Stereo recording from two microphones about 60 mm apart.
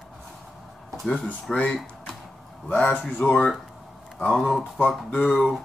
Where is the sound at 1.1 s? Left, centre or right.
Centre.